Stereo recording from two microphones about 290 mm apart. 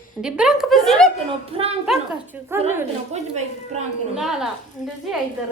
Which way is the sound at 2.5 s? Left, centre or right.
Centre.